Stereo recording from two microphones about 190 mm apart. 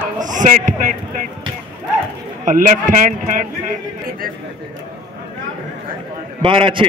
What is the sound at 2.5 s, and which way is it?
Speech, 45° right (ahead or behind).